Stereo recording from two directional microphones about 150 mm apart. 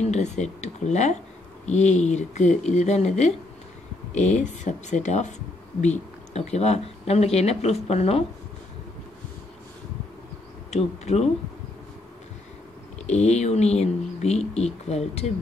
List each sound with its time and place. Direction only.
0.0 s speech: 50° left (ahead or behind)
10.7 s speech: 45° left (ahead or behind)
13.0 s speech: 45° left (ahead or behind)